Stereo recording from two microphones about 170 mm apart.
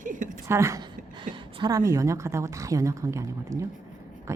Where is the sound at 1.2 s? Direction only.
25° right (ahead or behind).